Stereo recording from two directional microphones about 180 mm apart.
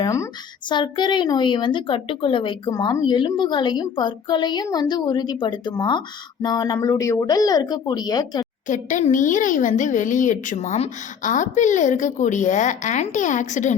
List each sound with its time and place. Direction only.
0.0 s a woman's voice: 15° left (ahead or behind)
8.6 s a woman's voice: 45° left (ahead or behind)